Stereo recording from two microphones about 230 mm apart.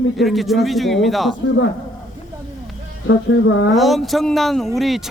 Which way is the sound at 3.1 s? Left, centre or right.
Left.